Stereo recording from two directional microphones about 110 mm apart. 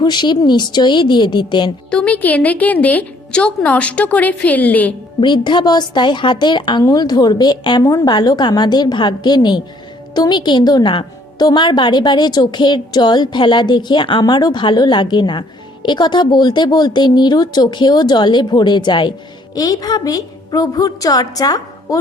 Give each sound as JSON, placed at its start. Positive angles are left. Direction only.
{"t": 0.0, "sound": "a woman's voice", "side_deg": 40}
{"t": 1.9, "sound": "a woman's voice", "side_deg": 10}
{"t": 5.2, "sound": "a woman's voice", "side_deg": 45}
{"t": 19.5, "sound": "a woman's voice", "side_deg": 35}